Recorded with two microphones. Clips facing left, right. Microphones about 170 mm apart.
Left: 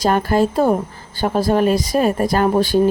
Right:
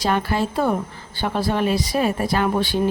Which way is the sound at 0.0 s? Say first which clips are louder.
Left 5 dB; 45° left (ahead or behind).